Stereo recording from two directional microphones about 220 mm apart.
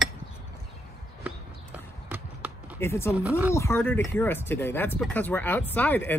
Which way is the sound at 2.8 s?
10° left (ahead or behind).